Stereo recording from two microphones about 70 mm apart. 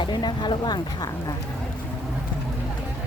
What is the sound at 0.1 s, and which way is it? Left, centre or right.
Speech, left.